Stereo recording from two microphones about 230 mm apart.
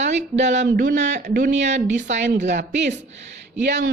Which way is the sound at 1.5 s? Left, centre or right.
Right.